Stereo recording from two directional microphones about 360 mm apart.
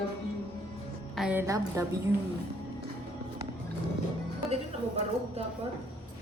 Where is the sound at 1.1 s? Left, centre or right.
Centre.